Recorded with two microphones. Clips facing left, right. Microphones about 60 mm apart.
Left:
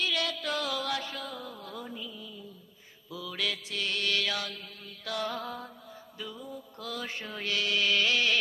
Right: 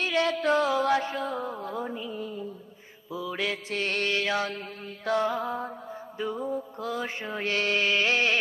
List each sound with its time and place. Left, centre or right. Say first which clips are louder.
0.0 s music: right 7 dB; right
3.1 s mantra: right 5 dB; right
6.1 s music: right 11 dB; right
6.9 s mantra: right 5 dB; right